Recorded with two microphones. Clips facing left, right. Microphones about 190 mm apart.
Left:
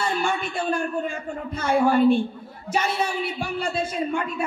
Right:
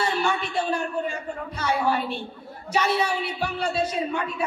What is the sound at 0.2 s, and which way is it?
A man's voice, 50° left (ahead or behind).